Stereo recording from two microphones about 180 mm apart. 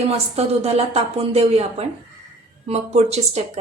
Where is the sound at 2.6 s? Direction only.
35° right (ahead or behind).